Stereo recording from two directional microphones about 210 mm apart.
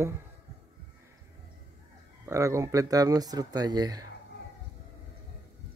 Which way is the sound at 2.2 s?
15° right (ahead or behind).